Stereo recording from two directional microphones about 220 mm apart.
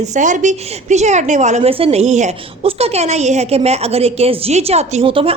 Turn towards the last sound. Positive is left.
turn(degrees=-25)  # may be behind; listen again after turning